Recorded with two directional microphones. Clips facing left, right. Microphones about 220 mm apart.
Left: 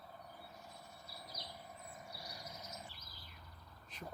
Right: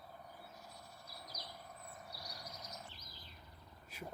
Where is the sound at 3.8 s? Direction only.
10° right (ahead or behind).